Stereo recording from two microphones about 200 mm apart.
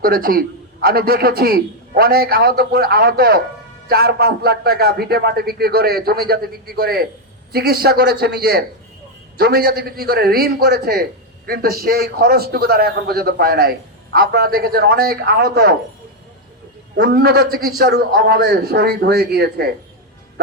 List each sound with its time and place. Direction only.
0.0 s a man's voice: 45° right (ahead or behind)
17.0 s a man's voice: 45° right (ahead or behind)